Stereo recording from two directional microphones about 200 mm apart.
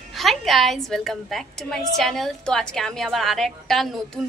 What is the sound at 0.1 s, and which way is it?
A woman's voice, centre (ahead or behind).